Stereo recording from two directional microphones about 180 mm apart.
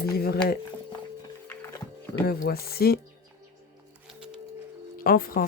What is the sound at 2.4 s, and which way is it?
Speech, 60° left (ahead or behind).